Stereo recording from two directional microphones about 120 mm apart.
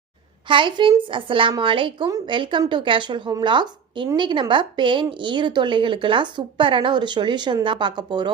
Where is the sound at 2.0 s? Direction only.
30° right (ahead or behind).